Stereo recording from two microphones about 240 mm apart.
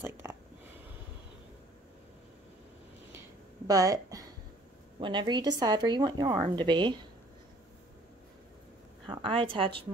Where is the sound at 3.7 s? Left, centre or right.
Centre.